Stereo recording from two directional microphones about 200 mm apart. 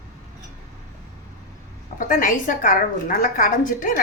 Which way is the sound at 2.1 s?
40° left (ahead or behind).